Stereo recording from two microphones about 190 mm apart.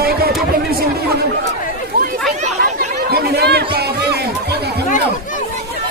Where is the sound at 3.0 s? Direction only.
55° right (ahead or behind).